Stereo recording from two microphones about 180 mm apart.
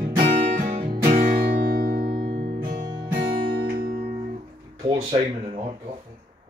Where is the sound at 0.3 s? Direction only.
45° right (ahead or behind).